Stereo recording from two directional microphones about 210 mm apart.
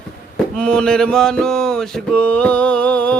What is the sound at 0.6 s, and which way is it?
Mantra, 5° left (ahead or behind).